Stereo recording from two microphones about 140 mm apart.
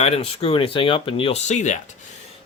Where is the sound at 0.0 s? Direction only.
45° left (ahead or behind).